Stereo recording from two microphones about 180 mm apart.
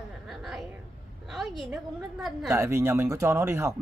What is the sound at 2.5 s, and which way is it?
Speech, 15° right (ahead or behind).